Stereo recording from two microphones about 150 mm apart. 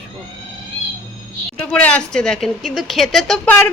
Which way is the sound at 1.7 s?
10° left (ahead or behind).